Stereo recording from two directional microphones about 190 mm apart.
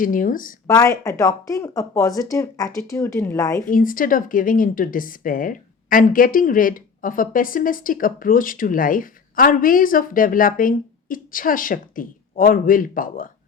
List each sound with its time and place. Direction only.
0.0 s a woman's voice: 45° left (ahead or behind)
0.7 s speech: 20° left (ahead or behind)
3.7 s a woman's voice: 45° left (ahead or behind)